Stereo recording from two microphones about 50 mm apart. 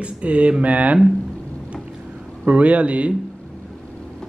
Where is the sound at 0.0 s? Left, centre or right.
Right.